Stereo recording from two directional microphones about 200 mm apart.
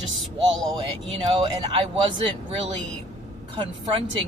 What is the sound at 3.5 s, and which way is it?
Speech, 25° right (ahead or behind).